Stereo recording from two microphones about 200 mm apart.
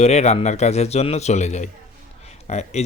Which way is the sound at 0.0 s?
35° left (ahead or behind).